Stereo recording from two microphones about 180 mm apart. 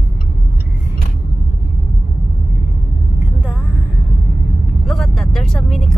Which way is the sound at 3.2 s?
10° right (ahead or behind).